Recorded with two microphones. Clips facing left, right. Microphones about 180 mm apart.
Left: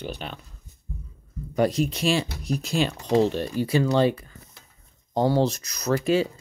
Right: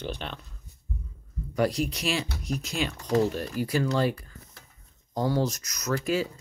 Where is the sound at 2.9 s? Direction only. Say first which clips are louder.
Left 2 dB; 20° left (ahead or behind).